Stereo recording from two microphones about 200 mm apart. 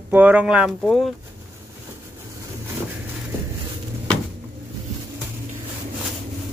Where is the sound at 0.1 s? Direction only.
5° right (ahead or behind).